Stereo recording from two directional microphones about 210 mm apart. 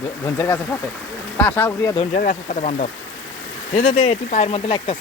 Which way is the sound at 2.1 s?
40° left (ahead or behind).